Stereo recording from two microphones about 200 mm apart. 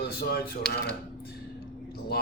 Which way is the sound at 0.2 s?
50° left (ahead or behind).